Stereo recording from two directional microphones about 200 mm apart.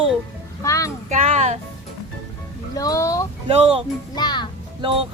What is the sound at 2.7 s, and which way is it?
Music, 15° left (ahead or behind).